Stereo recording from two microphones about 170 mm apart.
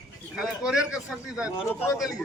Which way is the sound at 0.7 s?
5° right (ahead or behind).